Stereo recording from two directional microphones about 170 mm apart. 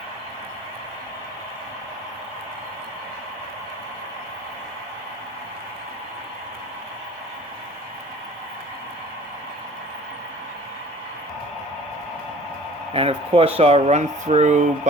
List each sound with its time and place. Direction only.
12.9 s speech: 35° right (ahead or behind)